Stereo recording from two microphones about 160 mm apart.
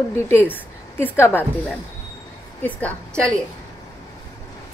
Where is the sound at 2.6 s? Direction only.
10° left (ahead or behind).